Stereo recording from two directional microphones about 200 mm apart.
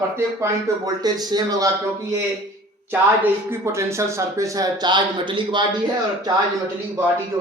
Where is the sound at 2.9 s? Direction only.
10° right (ahead or behind).